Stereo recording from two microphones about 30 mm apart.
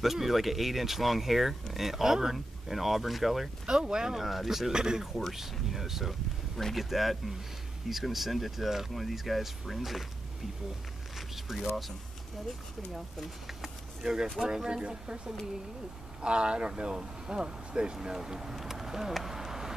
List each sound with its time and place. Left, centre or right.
0.0 s speech: centre
3.6 s speech: right
4.2 s speech: centre
4.7 s speech: right
5.3 s speech: centre
11.1 s zipper: centre
13.5 s a sound: centre
14.4 s speech: centre
14.7 s speech: right
19.1 s a sound: centre